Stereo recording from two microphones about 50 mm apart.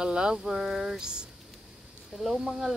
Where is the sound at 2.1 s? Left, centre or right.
Centre.